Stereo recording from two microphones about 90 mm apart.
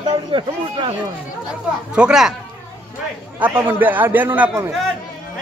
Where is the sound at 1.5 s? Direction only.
10° right (ahead or behind).